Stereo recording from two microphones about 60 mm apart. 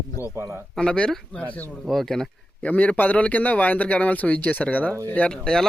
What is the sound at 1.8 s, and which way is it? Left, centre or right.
Speech, centre.